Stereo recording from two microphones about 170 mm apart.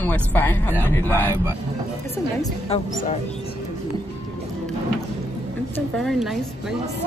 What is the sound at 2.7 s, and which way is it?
Speech, 40° left (ahead or behind).